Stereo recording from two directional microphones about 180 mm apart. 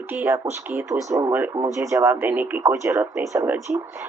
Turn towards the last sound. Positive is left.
turn(degrees=-15)  # may be behind; listen again after turning